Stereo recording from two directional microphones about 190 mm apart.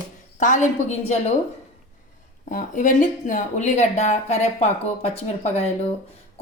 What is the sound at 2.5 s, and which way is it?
Speech, 45° left (ahead or behind).